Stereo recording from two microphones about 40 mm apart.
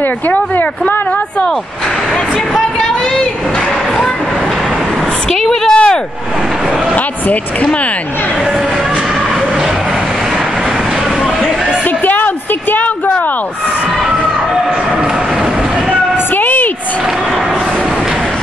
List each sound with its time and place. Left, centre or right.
0.3 s speech: left
5.7 s vehicle: left
16.3 s a sound: left